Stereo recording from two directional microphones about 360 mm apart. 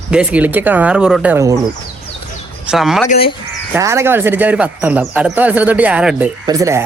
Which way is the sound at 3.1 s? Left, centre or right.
Left.